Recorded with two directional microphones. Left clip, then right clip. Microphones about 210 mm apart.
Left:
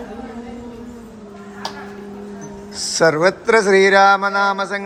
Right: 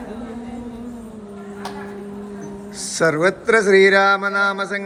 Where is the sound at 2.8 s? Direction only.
10° left (ahead or behind).